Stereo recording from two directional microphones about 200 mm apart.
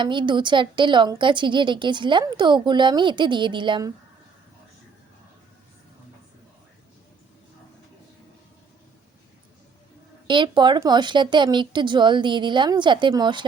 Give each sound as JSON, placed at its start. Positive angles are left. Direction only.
{"t": 0.0, "sound": "a woman's voice", "side_deg": -25}
{"t": 10.2, "sound": "a woman's voice", "side_deg": -25}